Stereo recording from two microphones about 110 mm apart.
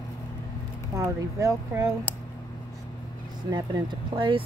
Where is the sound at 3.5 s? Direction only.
40° right (ahead or behind).